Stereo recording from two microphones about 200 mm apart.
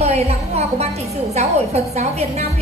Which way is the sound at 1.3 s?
35° right (ahead or behind).